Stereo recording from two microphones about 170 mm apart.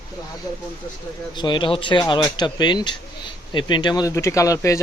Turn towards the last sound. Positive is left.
turn(degrees=20)  # may be behind; listen again after turning